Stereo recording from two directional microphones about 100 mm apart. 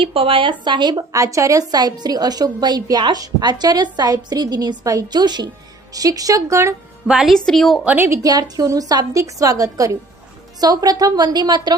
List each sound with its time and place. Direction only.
0.0 s speech: 65° right (ahead or behind)
0.6 s a woman's voice: 50° right (ahead or behind); by 6.7 s 30° right (ahead or behind)
7.1 s a woman's voice: 5° right (ahead or behind)
7.9 s a woman's voice: 25° right (ahead or behind); by 11.8 s 45° right (ahead or behind)